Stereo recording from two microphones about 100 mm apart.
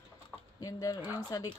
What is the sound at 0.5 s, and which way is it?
Speech, 35° left (ahead or behind).